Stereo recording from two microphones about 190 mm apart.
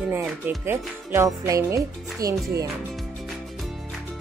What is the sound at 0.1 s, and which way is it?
Speech, 10° right (ahead or behind).